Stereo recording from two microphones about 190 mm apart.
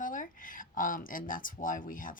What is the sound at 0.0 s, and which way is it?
Speech, 45° left (ahead or behind).